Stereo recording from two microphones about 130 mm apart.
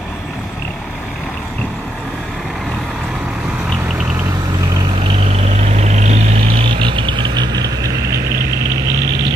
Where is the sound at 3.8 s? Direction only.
10° right (ahead or behind).